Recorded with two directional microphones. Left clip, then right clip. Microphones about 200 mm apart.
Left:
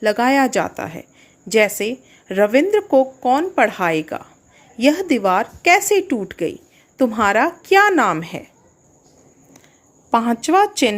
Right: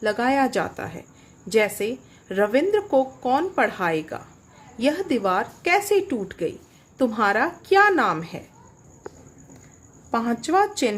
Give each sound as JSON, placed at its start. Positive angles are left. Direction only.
{"t": 0.0, "sound": "a woman's voice", "side_deg": 30}
{"t": 10.1, "sound": "speech", "side_deg": 30}